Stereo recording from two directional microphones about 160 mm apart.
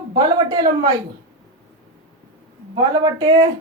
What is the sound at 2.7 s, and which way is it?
Speech, 25° right (ahead or behind).